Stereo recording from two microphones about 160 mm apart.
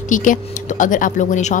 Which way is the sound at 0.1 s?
55° left (ahead or behind).